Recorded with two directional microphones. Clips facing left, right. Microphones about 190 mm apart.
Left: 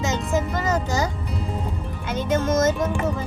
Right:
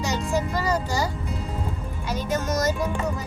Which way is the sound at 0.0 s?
20° left (ahead or behind).